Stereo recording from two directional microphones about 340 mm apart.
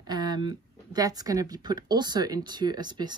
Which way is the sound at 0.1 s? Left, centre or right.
Centre.